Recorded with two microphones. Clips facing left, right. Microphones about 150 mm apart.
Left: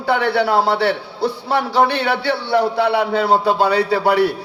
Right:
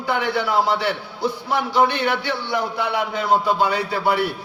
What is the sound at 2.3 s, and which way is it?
Speech, 35° left (ahead or behind).